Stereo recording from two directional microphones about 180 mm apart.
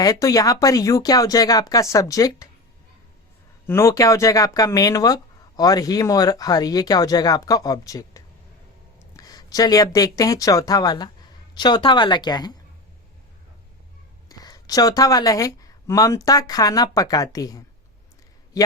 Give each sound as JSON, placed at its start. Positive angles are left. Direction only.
{"t": 0.0, "sound": "speech", "side_deg": 20}
{"t": 3.7, "sound": "speech", "side_deg": 15}
{"t": 14.3, "sound": "a man's voice", "side_deg": 20}